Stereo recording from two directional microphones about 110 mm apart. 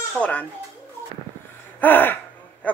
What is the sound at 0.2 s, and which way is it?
Speech, 10° left (ahead or behind).